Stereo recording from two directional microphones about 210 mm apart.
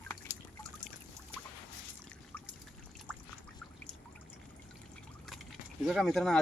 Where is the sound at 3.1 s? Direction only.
5° left (ahead or behind).